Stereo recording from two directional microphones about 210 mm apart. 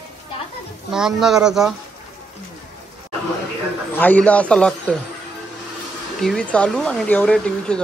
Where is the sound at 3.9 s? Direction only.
10° left (ahead or behind).